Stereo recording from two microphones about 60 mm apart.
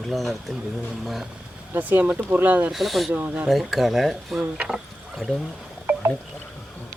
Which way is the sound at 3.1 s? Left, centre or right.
Right.